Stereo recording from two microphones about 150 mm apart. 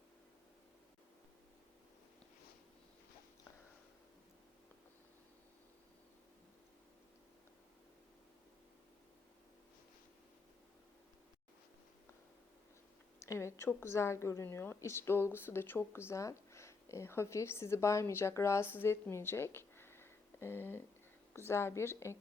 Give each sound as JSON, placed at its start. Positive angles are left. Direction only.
{"t": 13.1, "sound": "a woman's voice", "side_deg": 20}